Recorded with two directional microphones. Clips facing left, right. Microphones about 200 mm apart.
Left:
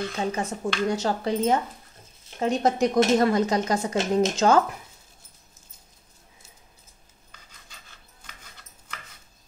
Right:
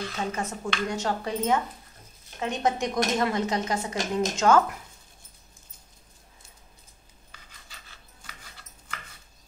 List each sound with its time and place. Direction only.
0.1 s speech: 25° left (ahead or behind); by 3.9 s 40° left (ahead or behind)
3.9 s speech: 25° left (ahead or behind)